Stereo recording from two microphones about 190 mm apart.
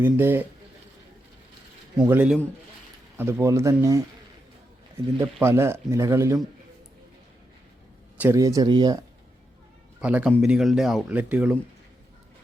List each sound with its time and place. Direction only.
0.0 s speech: 10° right (ahead or behind)
2.0 s speech: 10° right (ahead or behind)
5.1 s speech: 15° right (ahead or behind)
8.2 s speech: 15° right (ahead or behind)
10.0 s speech: 5° right (ahead or behind)